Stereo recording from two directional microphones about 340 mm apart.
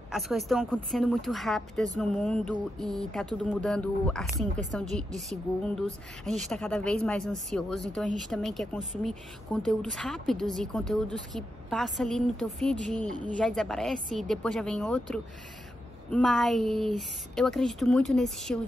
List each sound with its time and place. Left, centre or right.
0.1 s a woman's voice: centre